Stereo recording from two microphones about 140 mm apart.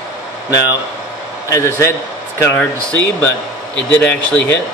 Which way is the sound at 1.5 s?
20° left (ahead or behind).